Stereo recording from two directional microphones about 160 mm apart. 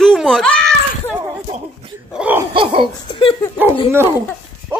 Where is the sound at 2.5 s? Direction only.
35° right (ahead or behind).